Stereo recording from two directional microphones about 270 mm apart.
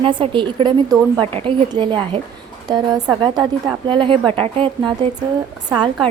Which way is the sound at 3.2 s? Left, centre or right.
Centre.